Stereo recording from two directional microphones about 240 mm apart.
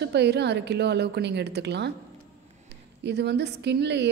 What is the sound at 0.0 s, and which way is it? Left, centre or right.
A woman's voice, right.